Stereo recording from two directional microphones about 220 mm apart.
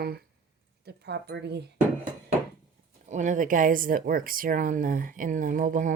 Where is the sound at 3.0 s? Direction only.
35° right (ahead or behind).